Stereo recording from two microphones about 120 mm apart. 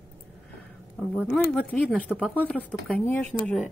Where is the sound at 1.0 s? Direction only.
10° left (ahead or behind).